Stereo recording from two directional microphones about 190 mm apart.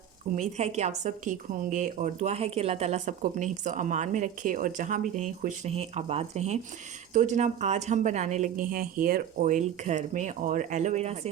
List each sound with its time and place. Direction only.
0.3 s a woman's voice: 35° right (ahead or behind)